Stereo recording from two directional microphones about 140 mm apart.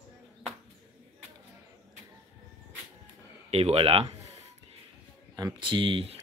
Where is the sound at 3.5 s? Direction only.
45° right (ahead or behind).